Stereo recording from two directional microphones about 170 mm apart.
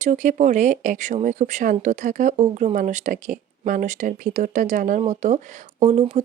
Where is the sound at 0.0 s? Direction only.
45° right (ahead or behind).